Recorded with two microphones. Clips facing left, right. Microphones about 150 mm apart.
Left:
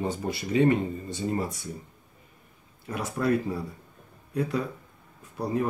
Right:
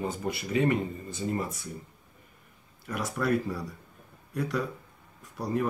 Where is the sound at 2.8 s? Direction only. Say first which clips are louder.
Left 2 dB; 25° left (ahead or behind).